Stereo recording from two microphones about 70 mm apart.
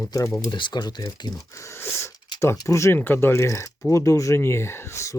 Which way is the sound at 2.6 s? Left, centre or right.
Left.